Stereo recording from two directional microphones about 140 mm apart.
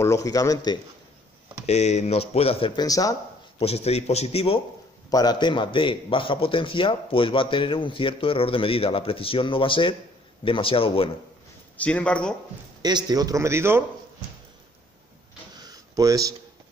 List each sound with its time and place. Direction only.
0.0 s speech: 25° left (ahead or behind)
1.7 s speech: 55° left (ahead or behind)
2.7 s speech: 25° left (ahead or behind)
3.5 s speech: 45° left (ahead or behind)
5.1 s a man's voice: 30° left (ahead or behind)
11.7 s speech: 10° left (ahead or behind)
12.8 s a man's voice: 30° right (ahead or behind)
15.6 s a sound: 25° right (ahead or behind)